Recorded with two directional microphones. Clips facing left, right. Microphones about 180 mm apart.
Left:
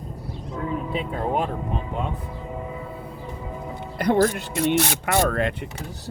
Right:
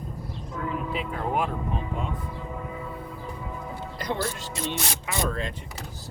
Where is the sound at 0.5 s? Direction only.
25° left (ahead or behind).